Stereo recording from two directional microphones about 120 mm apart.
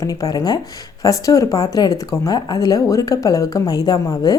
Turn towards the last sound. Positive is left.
turn(degrees=30)  # may be behind; listen again after turning